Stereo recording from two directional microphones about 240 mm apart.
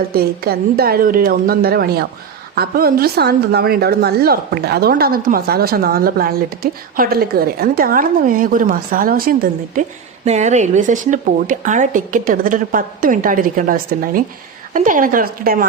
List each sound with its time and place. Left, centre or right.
0.1 s a woman's voice: right